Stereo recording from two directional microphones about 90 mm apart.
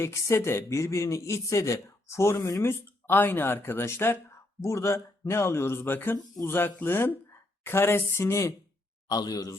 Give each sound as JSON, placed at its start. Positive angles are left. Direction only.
{"t": 0.0, "sound": "a man's voice", "side_deg": 30}
{"t": 9.0, "sound": "a man's voice", "side_deg": 45}